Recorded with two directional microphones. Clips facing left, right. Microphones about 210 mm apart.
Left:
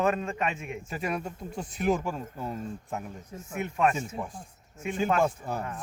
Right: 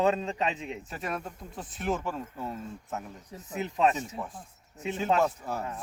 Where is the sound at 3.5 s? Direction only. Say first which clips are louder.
Even; 20° right (ahead or behind).